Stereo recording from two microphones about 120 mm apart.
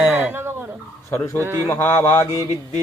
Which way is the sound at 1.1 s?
20° left (ahead or behind).